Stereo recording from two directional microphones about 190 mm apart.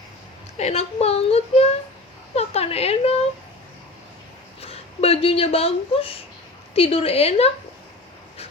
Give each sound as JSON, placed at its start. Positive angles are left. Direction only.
{"t": 0.5, "sound": "a woman's voice", "side_deg": 35}
{"t": 4.6, "sound": "a woman's voice", "side_deg": 30}